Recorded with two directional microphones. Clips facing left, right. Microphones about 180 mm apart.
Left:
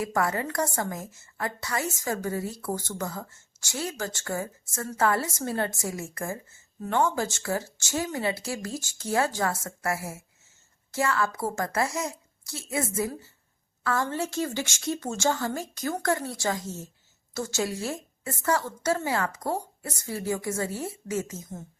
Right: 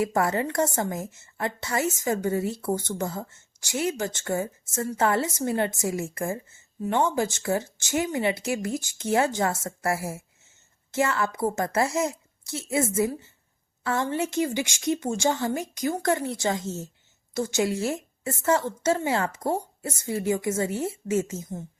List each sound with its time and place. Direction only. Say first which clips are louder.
0.0 s a woman's voice: right 3 dB; 25° right (ahead or behind)